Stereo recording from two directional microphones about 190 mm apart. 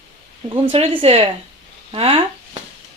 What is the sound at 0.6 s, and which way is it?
Speech, 30° right (ahead or behind).